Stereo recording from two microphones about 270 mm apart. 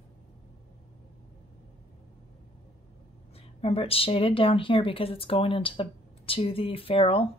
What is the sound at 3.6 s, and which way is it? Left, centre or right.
Speech, left.